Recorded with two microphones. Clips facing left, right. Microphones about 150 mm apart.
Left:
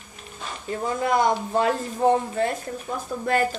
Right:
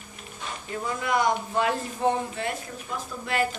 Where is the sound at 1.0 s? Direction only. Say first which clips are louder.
Left 3 dB; 35° left (ahead or behind).